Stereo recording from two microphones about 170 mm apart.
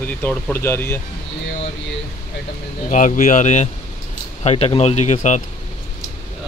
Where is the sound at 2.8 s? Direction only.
50° left (ahead or behind).